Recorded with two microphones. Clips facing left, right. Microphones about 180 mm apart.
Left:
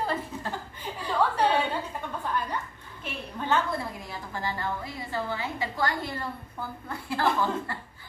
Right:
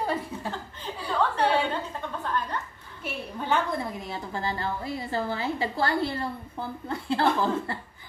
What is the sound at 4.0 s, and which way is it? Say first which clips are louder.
A woman's voice: right 3 dB; 25° right (ahead or behind).